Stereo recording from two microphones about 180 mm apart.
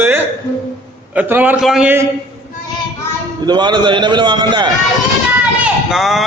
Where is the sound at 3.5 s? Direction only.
25° right (ahead or behind).